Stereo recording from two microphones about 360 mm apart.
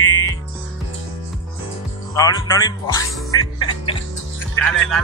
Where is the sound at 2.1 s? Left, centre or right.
Centre.